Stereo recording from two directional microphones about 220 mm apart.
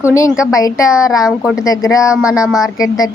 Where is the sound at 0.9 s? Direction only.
5° right (ahead or behind).